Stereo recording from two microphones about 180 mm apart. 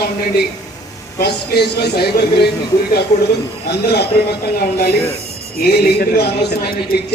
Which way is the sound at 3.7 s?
65° left (ahead or behind).